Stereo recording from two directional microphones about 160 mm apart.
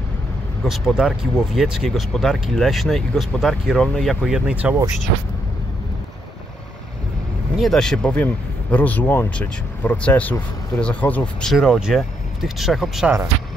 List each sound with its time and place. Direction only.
0.7 s speech: centre (ahead or behind)
7.5 s speech: centre (ahead or behind)